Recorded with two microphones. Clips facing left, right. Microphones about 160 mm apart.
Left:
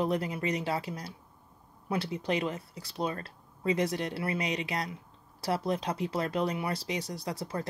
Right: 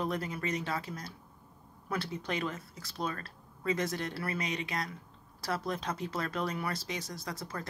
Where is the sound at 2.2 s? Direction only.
30° left (ahead or behind).